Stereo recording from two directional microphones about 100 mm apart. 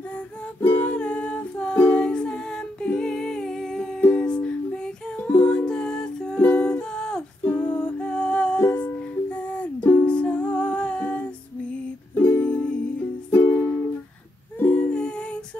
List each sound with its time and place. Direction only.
0.6 s music: 15° left (ahead or behind)
13.3 s music: 25° left (ahead or behind)
14.6 s music: 15° left (ahead or behind)